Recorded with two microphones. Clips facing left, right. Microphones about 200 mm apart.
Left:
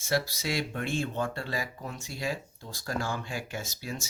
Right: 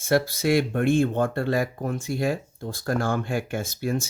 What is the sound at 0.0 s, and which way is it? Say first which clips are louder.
Speech: right 8 dB; 55° right (ahead or behind).